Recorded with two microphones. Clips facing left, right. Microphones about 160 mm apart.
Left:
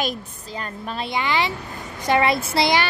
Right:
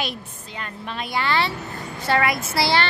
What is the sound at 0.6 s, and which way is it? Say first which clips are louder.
Speech: left 2 dB; 35° left (ahead or behind).